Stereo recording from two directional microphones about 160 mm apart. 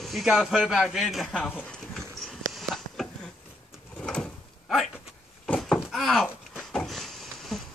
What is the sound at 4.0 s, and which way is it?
Door, 5° left (ahead or behind).